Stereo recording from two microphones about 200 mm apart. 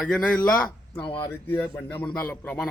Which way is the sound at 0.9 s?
25° left (ahead or behind).